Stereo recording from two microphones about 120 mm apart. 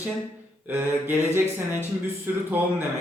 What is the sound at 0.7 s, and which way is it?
Mantra, 15° right (ahead or behind).